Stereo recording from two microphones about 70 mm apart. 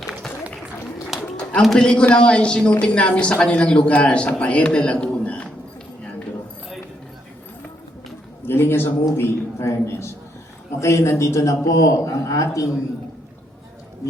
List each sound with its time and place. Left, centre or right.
0.0 s run: centre
1.1 s a sound: centre
1.6 s a man's voice: centre
8.4 s a man's voice: left